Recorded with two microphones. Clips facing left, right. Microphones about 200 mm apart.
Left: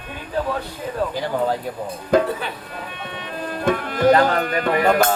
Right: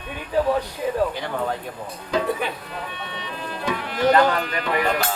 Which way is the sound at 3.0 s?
50° left (ahead or behind).